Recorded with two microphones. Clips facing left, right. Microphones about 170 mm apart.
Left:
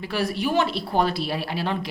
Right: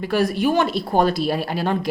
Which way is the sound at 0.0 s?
50° right (ahead or behind).